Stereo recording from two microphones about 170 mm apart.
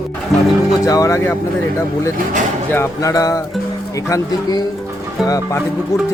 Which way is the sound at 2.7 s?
15° left (ahead or behind).